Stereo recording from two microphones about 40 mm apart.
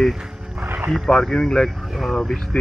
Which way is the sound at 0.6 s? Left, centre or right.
Right.